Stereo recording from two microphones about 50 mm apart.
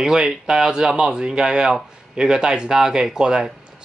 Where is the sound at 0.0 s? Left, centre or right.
Centre.